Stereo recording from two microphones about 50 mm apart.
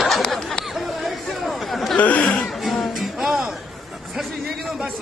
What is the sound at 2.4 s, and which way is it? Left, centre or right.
Music, centre.